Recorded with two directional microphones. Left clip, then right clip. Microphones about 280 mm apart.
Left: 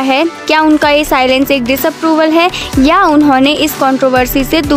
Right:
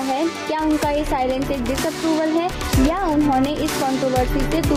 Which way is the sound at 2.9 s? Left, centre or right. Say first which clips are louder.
Left 14 dB; left.